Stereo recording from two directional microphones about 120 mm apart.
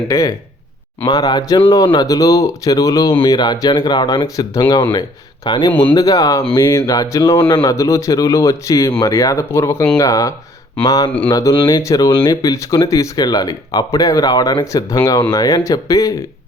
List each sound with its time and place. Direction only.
0.1 s speech: 30° left (ahead or behind)
3.1 s speech: 40° left (ahead or behind)